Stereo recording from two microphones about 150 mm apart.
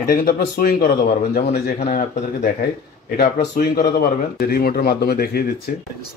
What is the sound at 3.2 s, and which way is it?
Speech, 80° left.